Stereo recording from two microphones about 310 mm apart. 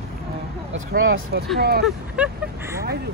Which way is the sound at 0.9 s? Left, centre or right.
Right.